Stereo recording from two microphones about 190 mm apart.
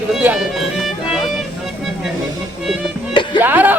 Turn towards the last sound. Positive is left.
turn(degrees=-10)  # may be behind; listen again after turning